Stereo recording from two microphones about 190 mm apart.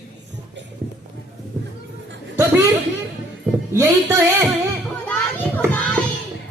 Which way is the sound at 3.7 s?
15° right (ahead or behind).